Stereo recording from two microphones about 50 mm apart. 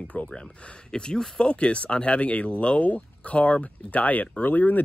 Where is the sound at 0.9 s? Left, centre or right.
Centre.